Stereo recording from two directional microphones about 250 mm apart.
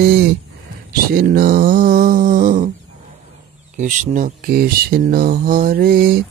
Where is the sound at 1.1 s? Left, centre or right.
Right.